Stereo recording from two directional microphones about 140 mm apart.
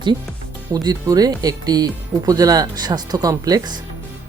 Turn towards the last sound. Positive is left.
turn(degrees=-25)  # may be behind; listen again after turning